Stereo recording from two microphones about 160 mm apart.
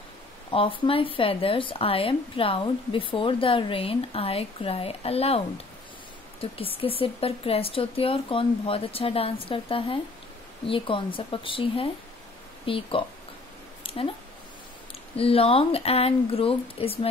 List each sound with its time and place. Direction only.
0.5 s speech: 35° left (ahead or behind)
6.4 s speech: 35° left (ahead or behind)
13.8 s a sound: 35° left (ahead or behind)
15.1 s speech: 35° left (ahead or behind)